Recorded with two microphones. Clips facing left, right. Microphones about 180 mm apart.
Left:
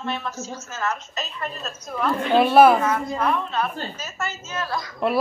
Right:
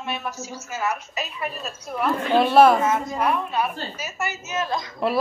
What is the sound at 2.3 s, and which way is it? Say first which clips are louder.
Speech: left 1 dB; 5° left (ahead or behind).